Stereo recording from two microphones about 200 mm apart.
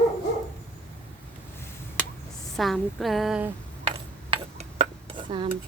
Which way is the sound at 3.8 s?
25° right (ahead or behind).